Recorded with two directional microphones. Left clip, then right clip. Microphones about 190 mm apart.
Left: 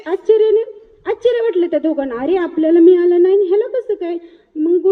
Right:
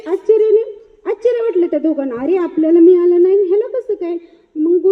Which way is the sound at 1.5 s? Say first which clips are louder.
Right 1 dB; 40° right (ahead or behind).